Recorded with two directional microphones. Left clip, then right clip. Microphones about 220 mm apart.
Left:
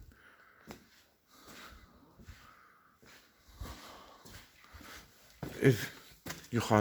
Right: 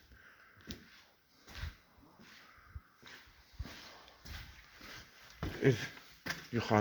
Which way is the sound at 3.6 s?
30° left (ahead or behind).